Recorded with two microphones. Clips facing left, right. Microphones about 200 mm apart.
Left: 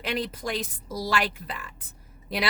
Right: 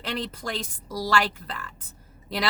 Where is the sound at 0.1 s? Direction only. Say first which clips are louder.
Left 2 dB; 10° left (ahead or behind).